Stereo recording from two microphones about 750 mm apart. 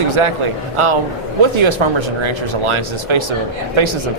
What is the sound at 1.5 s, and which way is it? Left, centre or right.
Speech, right.